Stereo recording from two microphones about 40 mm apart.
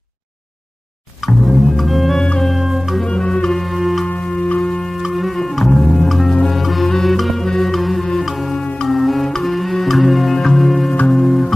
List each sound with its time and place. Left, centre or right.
1.2 s music: centre
3.1 s music: left
3.4 s music: centre
3.7 s music: centre
4.2 s music: left
4.9 s music: centre
6.0 s music: centre